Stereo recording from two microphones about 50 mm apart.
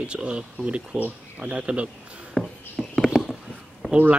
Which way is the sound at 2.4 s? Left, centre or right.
Centre.